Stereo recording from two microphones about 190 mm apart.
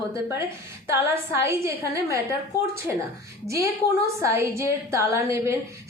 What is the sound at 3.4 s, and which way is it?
A woman's voice, 15° right (ahead or behind).